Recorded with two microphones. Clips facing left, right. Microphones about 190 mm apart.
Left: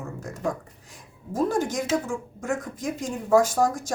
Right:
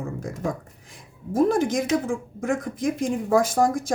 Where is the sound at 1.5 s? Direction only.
90° right.